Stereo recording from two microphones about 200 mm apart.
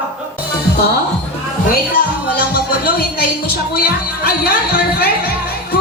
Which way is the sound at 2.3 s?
50° left (ahead or behind).